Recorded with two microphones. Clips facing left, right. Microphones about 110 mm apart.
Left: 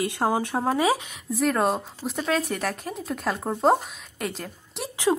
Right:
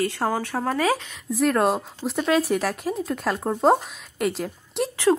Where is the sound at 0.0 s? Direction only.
15° left (ahead or behind).